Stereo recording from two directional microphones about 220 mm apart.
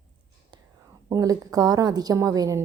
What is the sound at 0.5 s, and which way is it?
Whispering, 20° right (ahead or behind).